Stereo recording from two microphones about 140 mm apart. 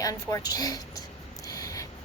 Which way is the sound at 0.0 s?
25° left (ahead or behind).